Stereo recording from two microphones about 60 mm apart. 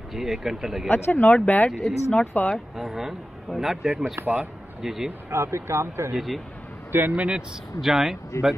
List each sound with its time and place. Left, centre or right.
0.1 s speech: centre
0.8 s speech: left
1.7 s speech: centre
2.1 s speech: left
2.5 s speech: centre
4.2 s speech: right
4.8 s speech: centre
5.3 s speech: right
6.1 s speech: centre
6.9 s a man's voice: right
7.2 s speech: centre